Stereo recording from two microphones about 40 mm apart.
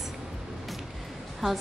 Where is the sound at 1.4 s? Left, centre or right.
Centre.